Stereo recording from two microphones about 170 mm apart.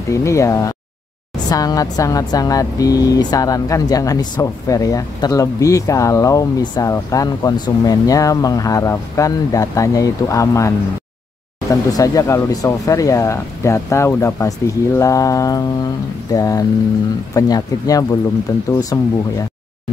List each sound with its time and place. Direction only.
0.1 s speech: 15° left (ahead or behind)
11.7 s speech: 20° left (ahead or behind)